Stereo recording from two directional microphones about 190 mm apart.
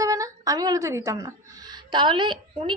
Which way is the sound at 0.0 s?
15° right (ahead or behind).